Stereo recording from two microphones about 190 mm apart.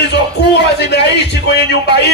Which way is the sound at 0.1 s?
60° left (ahead or behind).